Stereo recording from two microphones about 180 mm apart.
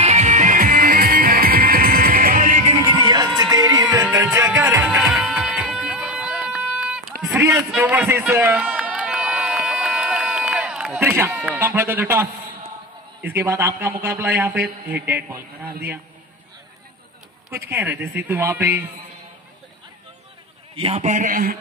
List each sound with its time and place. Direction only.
0.0 s music: 35° right (ahead or behind)
3.0 s music: 25° right (ahead or behind)
5.1 s a sound: 5° right (ahead or behind)
7.3 s run: 10° right (ahead or behind)
11.3 s a sound: centre (ahead or behind)
11.6 s a man's voice: 10° right (ahead or behind)
17.5 s a man's voice: 15° right (ahead or behind)
20.7 s a man's voice: 35° right (ahead or behind); by 21.5 s 50° right (ahead or behind)